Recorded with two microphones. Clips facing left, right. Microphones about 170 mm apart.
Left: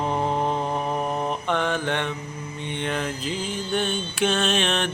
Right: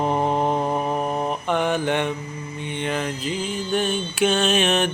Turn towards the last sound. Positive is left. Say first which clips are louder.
# right 4 dB
turn(degrees=-10)  # may be behind; listen again after turning